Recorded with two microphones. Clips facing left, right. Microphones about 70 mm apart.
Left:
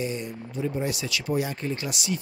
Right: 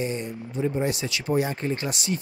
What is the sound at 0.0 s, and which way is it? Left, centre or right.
Speech, right.